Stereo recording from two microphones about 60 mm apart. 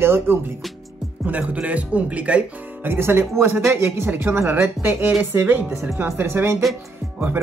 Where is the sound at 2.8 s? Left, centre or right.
Right.